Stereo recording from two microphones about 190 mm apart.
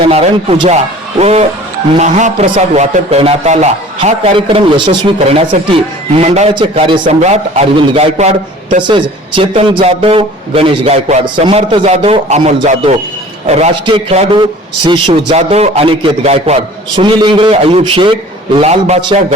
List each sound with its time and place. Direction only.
0.0 s a man's voice: 30° right (ahead or behind)
6.5 s a man's voice: 25° right (ahead or behind)
7.1 s a man's voice: 35° right (ahead or behind)
15.3 s a man's voice: 35° right (ahead or behind)